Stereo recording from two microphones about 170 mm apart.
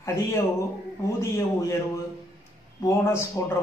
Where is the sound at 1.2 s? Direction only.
15° left (ahead or behind).